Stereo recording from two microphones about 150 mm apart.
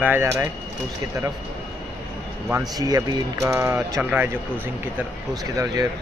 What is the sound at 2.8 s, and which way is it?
Speech, 25° right (ahead or behind).